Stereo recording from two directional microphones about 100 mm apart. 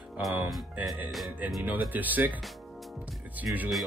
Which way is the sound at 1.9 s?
15° right (ahead or behind).